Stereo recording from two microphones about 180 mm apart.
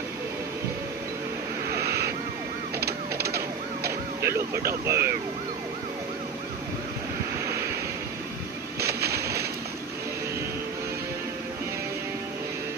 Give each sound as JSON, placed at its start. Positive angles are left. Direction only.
{"t": 1.8, "sound": "vehicle", "side_deg": -60}
{"t": 2.8, "sound": "emergency vehicle", "side_deg": -60}
{"t": 4.2, "sound": "speech", "side_deg": -15}
{"t": 8.7, "sound": "a sound", "side_deg": -60}